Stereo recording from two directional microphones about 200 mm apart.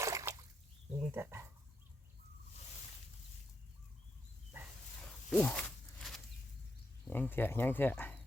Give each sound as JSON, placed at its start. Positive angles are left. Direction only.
{"t": 0.0, "sound": "splash", "side_deg": -15}
{"t": 1.1, "sound": "speech", "side_deg": -15}
{"t": 5.3, "sound": "a sound", "side_deg": 5}
{"t": 7.1, "sound": "speech", "side_deg": 10}